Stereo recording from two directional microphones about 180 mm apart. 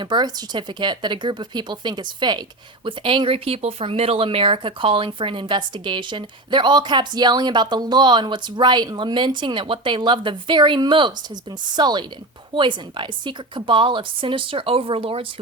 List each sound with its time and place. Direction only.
0.0 s speech: 25° right (ahead or behind)